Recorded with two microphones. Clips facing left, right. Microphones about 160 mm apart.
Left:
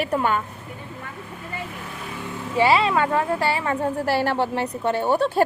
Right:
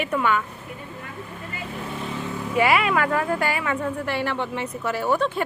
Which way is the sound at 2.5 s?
30° left (ahead or behind).